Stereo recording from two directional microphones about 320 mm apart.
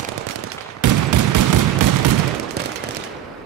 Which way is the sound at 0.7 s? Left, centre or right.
Right.